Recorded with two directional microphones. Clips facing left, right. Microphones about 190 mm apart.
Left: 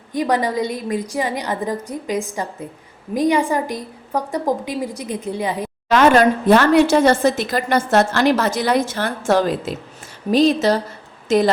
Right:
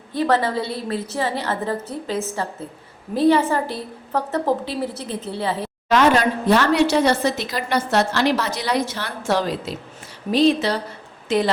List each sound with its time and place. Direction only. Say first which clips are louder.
0.1 s a woman's voice: left 1 dB; 15° left (ahead or behind)
6.0 s a woman's voice: left 5 dB; 50° left (ahead or behind)